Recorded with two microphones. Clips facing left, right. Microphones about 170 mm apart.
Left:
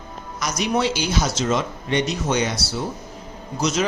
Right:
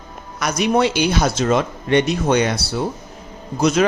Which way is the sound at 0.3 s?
60° right (ahead or behind).